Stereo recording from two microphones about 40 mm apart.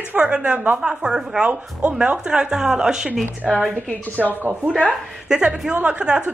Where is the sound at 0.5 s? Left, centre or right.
Right.